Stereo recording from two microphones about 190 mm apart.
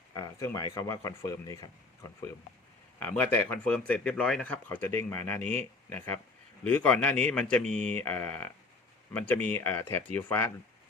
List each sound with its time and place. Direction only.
0.2 s speech: 15° left (ahead or behind)
5.4 s speech: 40° right (ahead or behind)
6.7 s speech: 10° left (ahead or behind)